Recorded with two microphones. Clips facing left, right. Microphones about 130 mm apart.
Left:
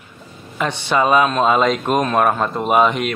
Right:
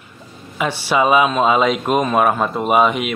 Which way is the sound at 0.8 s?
5° right (ahead or behind).